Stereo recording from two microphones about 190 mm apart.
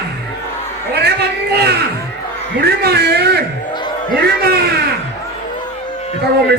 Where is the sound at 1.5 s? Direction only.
60° right (ahead or behind).